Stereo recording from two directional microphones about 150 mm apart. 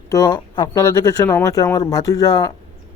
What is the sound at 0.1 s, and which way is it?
Speech, 25° left (ahead or behind).